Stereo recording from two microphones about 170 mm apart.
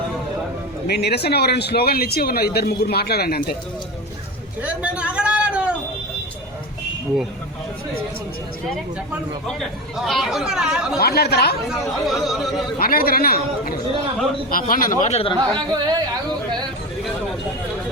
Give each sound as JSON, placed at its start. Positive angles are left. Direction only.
{"t": 0.9, "sound": "speech", "side_deg": 75}
{"t": 4.6, "sound": "a sound", "side_deg": -5}
{"t": 9.5, "sound": "speech", "side_deg": 0}
{"t": 11.0, "sound": "speech", "side_deg": 65}
{"t": 12.0, "sound": "speech", "side_deg": 0}
{"t": 12.8, "sound": "a man's voice", "side_deg": 60}
{"t": 15.4, "sound": "speech", "side_deg": -25}